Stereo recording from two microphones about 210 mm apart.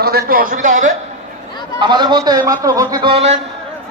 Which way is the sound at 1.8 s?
20° right (ahead or behind).